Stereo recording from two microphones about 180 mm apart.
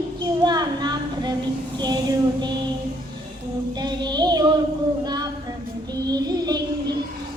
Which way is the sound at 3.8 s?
25° right (ahead or behind).